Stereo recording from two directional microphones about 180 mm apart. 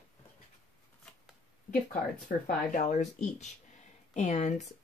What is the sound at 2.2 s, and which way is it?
A woman's voice, 45° left (ahead or behind).